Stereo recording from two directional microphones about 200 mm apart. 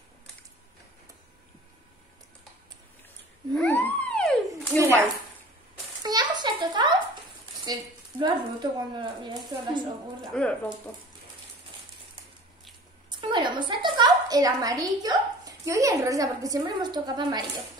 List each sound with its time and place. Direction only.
3.5 s theremin: 10° left (ahead or behind)
4.7 s a sound: 15° right (ahead or behind)
6.0 s a sound: 20° right (ahead or behind)
7.6 s speech: 20° right (ahead or behind)
10.3 s speech: 5° left (ahead or behind)
13.2 s a woman's voice: 25° right (ahead or behind)